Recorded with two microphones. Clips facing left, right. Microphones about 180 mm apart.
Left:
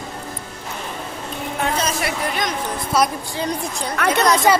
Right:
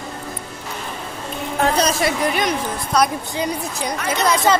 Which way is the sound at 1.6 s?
35° right (ahead or behind).